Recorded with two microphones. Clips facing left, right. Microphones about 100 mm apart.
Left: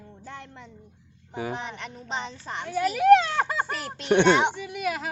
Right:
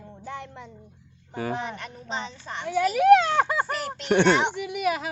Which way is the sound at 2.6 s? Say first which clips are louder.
Right 1 dB; 10° right (ahead or behind).